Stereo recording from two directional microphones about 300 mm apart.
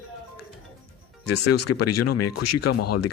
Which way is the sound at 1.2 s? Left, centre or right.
Left.